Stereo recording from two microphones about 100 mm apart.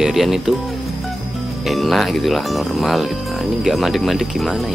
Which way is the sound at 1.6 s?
Centre (ahead or behind).